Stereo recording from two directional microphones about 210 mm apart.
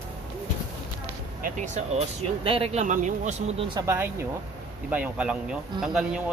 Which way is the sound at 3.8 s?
10° right (ahead or behind).